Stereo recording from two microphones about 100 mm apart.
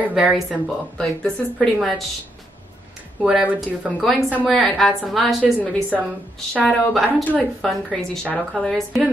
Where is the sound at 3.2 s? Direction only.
10° right (ahead or behind).